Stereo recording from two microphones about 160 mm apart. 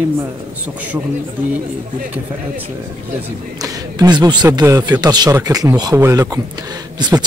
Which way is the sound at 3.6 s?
25° right (ahead or behind).